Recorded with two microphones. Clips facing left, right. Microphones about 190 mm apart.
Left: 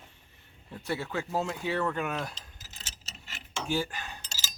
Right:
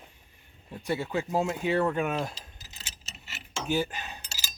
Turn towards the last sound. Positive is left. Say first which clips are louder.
# right 1 dB
turn(degrees=-15)  # may be behind; listen again after turning